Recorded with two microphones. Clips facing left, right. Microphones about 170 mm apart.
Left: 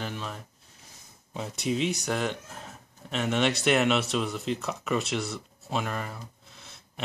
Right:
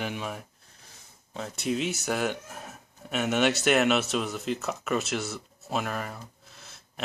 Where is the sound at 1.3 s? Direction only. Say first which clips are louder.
Even; 5° left (ahead or behind).